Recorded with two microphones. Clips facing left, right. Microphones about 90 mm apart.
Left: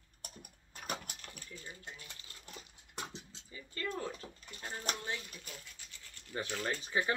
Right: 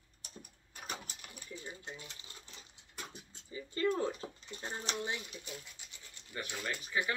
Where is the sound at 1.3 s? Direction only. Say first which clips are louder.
Right 6 dB; 20° right (ahead or behind).